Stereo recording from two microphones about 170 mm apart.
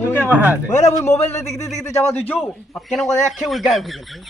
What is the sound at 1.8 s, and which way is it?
A man's voice, 15° left (ahead or behind).